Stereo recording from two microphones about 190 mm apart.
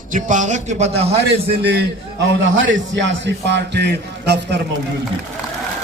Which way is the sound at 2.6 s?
75° right (ahead or behind).